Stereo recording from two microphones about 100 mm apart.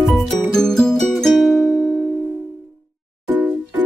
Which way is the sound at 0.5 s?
5° left (ahead or behind).